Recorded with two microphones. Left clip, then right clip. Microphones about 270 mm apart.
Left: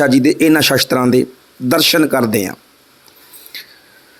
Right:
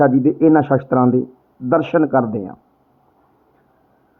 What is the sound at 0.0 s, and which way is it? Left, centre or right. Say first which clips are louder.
Speech: left 2 dB; left.